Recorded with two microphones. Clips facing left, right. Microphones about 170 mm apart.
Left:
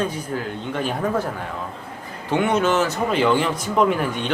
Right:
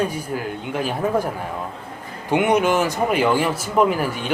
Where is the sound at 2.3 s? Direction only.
15° right (ahead or behind).